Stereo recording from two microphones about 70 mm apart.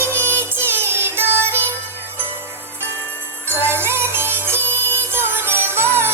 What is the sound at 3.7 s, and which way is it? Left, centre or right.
Music, right.